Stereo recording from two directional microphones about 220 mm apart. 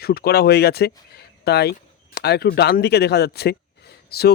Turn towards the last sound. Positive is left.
turn(degrees=45)  # may be behind; listen again after turning